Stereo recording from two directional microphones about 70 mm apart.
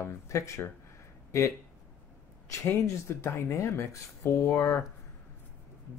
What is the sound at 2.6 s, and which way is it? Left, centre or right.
Speech, left.